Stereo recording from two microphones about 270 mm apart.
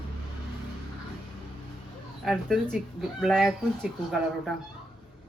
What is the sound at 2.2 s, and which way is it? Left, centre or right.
Speech, centre.